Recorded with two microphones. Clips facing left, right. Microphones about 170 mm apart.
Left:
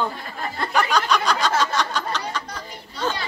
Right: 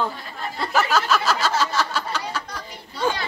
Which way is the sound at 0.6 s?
5° right (ahead or behind).